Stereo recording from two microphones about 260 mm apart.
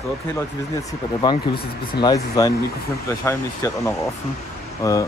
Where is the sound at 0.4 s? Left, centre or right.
Centre.